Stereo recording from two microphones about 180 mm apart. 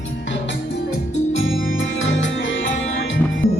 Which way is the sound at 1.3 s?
90° left.